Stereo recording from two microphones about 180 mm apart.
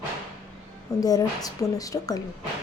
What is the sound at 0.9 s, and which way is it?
A woman's voice, 20° left (ahead or behind).